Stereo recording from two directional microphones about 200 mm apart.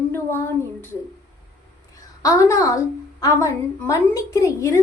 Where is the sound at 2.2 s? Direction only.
15° left (ahead or behind).